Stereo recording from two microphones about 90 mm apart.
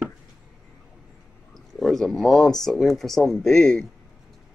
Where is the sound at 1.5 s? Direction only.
Centre (ahead or behind).